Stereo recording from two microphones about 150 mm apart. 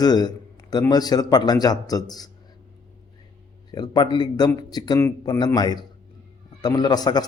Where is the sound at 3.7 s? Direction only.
25° left (ahead or behind).